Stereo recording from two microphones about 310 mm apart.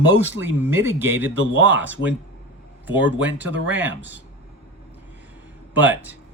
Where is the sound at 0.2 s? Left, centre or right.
Centre.